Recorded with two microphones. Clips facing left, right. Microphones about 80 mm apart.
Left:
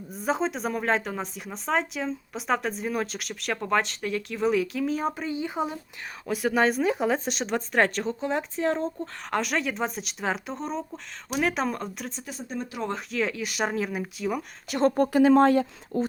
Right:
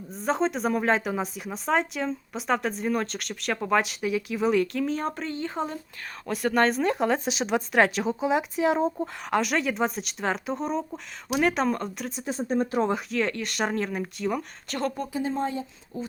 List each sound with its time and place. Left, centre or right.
0.1 s speech: centre
12.2 s speech: right
12.9 s speech: centre
14.9 s speech: left
15.2 s speech: left
15.9 s speech: left